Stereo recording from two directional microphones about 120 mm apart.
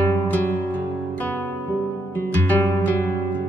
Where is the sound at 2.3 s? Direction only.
15° left (ahead or behind).